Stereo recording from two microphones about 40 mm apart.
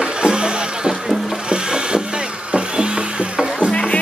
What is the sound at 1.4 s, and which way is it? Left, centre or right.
Wood, right.